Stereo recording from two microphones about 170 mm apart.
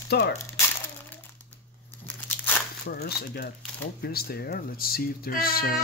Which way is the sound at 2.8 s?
70° left (ahead or behind).